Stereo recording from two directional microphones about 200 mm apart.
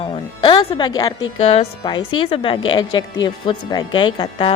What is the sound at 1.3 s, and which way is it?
Speech, 30° left (ahead or behind).